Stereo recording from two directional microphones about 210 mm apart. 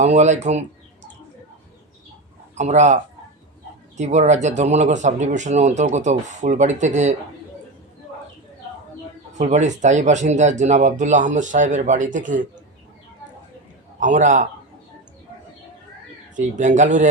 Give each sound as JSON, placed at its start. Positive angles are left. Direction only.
{"t": 0.0, "sound": "speech", "side_deg": -35}
{"t": 2.6, "sound": "speech", "side_deg": -35}
{"t": 9.4, "sound": "speech", "side_deg": -35}
{"t": 14.0, "sound": "speech", "side_deg": -35}
{"t": 16.3, "sound": "speech", "side_deg": -35}